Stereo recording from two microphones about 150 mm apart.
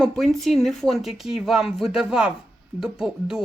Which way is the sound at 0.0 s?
Centre (ahead or behind).